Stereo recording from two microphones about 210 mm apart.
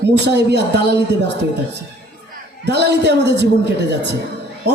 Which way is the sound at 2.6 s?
55° right (ahead or behind).